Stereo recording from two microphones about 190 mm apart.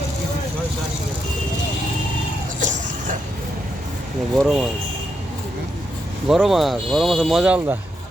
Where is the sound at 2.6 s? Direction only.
40° right (ahead or behind).